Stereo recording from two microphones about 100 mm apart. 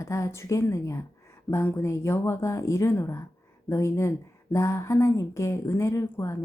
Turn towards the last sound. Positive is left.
turn(degrees=30)  # may be behind; listen again after turning